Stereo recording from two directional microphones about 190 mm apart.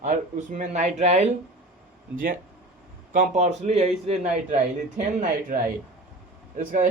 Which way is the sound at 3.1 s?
40° right (ahead or behind).